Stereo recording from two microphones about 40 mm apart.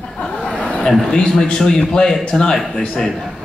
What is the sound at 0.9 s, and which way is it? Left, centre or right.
Speech, centre.